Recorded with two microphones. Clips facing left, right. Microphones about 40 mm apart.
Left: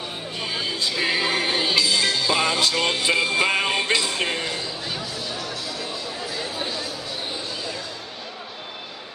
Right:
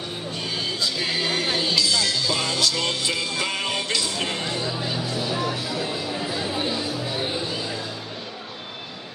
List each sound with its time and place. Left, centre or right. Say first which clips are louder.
0.4 s music: left 1 dB; centre; by 4.4 s left
5.1 s music: right 5 dB; centre